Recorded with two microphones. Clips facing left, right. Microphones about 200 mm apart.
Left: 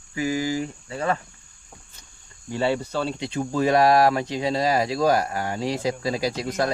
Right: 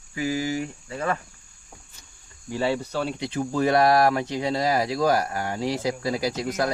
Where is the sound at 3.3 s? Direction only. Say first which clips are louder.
Left 1 dB; 15° left (ahead or behind).